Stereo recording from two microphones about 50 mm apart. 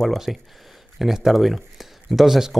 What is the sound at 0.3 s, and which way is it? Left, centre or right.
A man's voice, centre.